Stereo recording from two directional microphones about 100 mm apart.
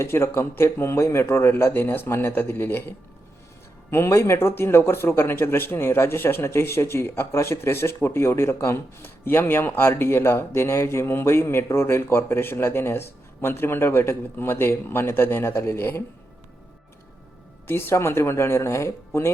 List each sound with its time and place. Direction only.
0.0 s speech: 25° left (ahead or behind)
3.9 s speech: 25° left (ahead or behind)
17.7 s speech: 25° left (ahead or behind)